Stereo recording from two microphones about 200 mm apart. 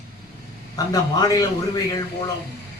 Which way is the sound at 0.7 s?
20° left (ahead or behind).